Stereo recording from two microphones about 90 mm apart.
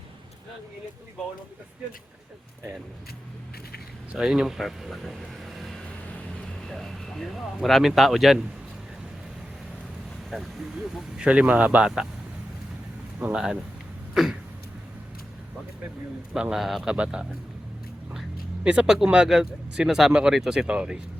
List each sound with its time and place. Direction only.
4.1 s speech: 5° right (ahead or behind)
10.2 s speech: centre (ahead or behind)
13.1 s speech: 15° right (ahead or behind)
14.1 s a sound: 5° right (ahead or behind)
16.3 s speech: 5° right (ahead or behind)
18.6 s speech: 10° right (ahead or behind)